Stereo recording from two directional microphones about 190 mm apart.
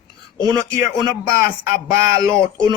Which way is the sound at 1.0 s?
50° left (ahead or behind).